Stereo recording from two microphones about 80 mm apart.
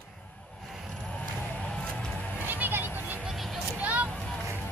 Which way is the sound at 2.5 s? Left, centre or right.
Right.